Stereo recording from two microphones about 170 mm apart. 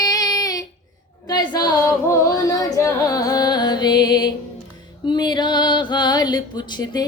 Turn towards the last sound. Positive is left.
turn(degrees=25)  # may be behind; listen again after turning